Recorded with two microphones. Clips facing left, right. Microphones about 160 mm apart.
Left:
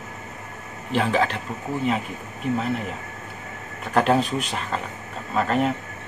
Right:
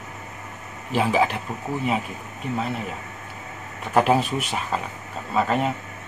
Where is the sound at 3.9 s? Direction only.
5° right (ahead or behind).